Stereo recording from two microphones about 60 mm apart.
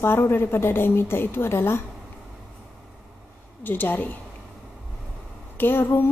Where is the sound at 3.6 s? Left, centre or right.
Left.